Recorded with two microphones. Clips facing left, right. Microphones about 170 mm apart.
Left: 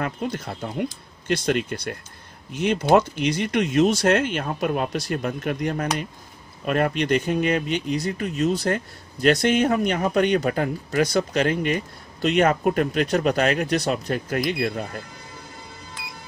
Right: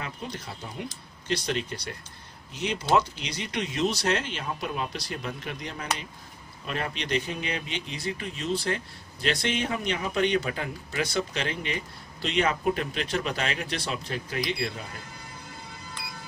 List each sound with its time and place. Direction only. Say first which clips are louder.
0.0 s speech: left 9 dB; 55° left (ahead or behind)